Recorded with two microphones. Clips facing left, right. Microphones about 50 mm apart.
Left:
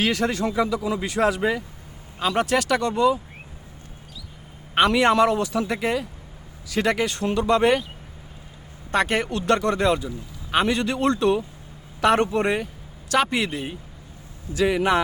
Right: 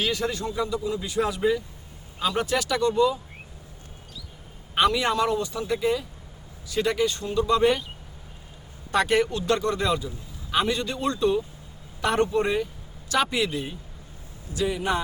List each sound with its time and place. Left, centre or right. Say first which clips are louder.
0.0 s speech: left 4 dB; left
2.1 s speech: left 3 dB; left
4.7 s speech: left 4 dB; left
8.9 s speech: even; left
9.3 s speech: left 3 dB; left
9.8 s speech: left 4 dB; left
10.8 s speech: left 4 dB; left
13.3 s speech: left 1 dB; left
14.6 s speech: left 6 dB; left